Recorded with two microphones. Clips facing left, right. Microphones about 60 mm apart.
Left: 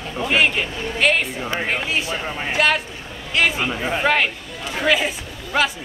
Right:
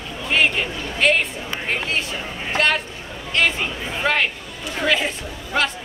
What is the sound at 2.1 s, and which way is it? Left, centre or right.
Speech, left.